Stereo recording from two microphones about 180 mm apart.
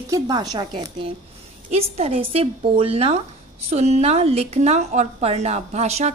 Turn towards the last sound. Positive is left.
turn(degrees=-35)  # may be behind; listen again after turning